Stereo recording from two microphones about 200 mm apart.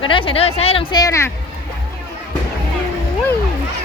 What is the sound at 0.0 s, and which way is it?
Speech, 25° left (ahead or behind).